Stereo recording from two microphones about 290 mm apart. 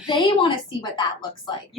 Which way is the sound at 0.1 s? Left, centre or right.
Centre.